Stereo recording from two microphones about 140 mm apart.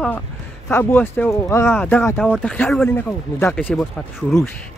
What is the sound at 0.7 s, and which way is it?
Speech, 15° left (ahead or behind).